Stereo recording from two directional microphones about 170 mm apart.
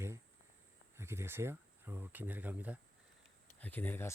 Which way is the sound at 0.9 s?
15° right (ahead or behind).